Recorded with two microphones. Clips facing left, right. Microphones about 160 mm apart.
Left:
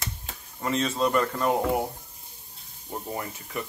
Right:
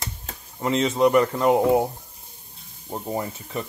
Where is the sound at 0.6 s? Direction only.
20° right (ahead or behind).